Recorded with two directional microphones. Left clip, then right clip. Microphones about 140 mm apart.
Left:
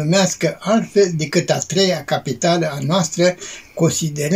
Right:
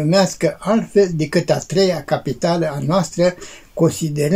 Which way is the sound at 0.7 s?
15° right (ahead or behind).